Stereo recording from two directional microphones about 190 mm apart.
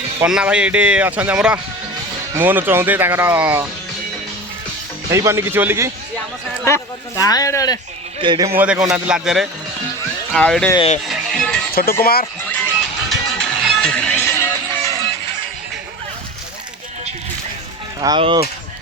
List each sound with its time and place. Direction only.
0.2 s speech: 5° right (ahead or behind)
5.1 s speech: 15° right (ahead or behind)
6.7 s speech: 15° left (ahead or behind)
8.2 s speech: 20° right (ahead or behind)
8.5 s a man's voice: 5° right (ahead or behind)
10.8 s speech: 35° left (ahead or behind)
11.1 s music: centre (ahead or behind)
11.7 s speech: 50° left (ahead or behind)
12.4 s music: 10° left (ahead or behind)
18.0 s speech: 25° right (ahead or behind)